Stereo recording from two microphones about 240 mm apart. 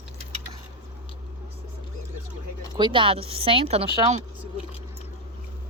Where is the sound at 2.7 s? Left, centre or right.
Centre.